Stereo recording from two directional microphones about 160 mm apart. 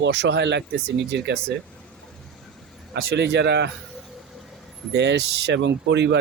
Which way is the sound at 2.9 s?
85° right.